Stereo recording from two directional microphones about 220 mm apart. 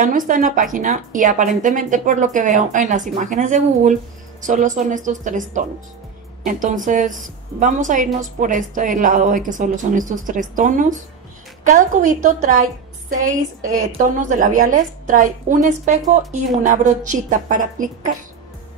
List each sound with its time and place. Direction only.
0.0 s a woman's voice: 35° right (ahead or behind)